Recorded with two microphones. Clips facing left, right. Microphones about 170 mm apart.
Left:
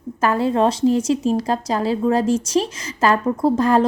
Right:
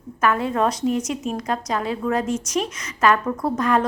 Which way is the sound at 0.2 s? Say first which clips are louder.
Left 3 dB; 30° left (ahead or behind).